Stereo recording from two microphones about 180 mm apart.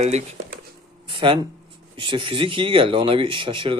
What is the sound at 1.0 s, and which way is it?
Speech, 30° right (ahead or behind).